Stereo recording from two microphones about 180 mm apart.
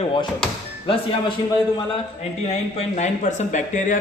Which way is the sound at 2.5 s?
40° left (ahead or behind).